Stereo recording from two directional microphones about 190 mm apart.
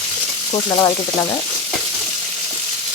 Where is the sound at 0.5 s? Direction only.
25° left (ahead or behind).